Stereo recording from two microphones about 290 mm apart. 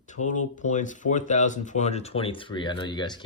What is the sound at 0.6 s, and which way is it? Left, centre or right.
Speech, left.